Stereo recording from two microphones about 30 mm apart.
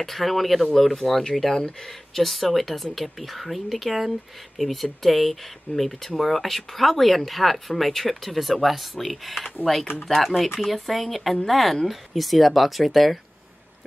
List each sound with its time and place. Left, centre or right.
0.0 s speech: centre
1.5 s speech: left
1.9 s speech: centre